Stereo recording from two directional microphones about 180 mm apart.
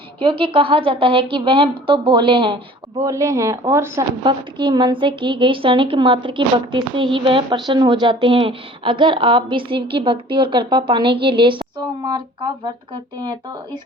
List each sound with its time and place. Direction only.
0.2 s a woman's voice: 30° right (ahead or behind)
3.0 s speech: 15° right (ahead or behind)
4.2 s a woman's voice: 25° right (ahead or behind)